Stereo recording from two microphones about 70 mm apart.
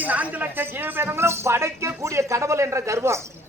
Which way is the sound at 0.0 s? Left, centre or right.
Right.